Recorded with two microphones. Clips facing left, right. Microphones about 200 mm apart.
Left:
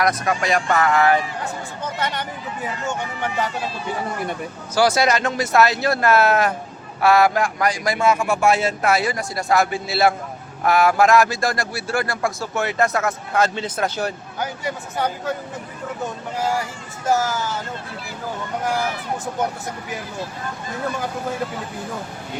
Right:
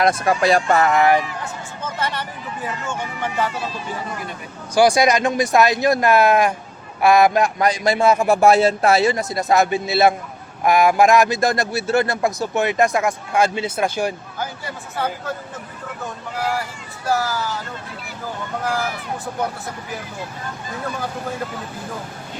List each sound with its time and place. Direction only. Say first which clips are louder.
0.0 s a man's voice: right 4 dB; 30° right (ahead or behind)
4.7 s a man's voice: right 3 dB; 15° right (ahead or behind)
14.3 s speech: left 3 dB; 15° left (ahead or behind)
16.4 s speech: left 1 dB; 20° left (ahead or behind)